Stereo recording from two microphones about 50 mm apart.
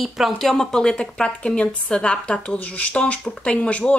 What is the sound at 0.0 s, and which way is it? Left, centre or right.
Speech, centre.